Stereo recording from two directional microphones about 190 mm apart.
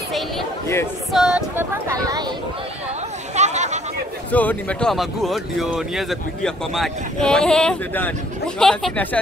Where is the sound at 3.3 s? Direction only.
35° right (ahead or behind).